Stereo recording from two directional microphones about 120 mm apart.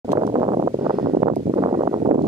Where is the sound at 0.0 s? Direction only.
35° right (ahead or behind).